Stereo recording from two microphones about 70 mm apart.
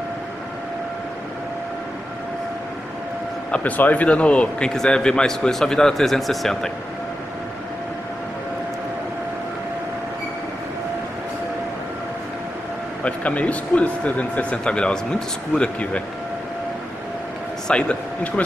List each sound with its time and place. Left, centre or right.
3.5 s a man's voice: left; by 6.7 s centre
13.0 s a man's voice: centre
17.6 s a sound: centre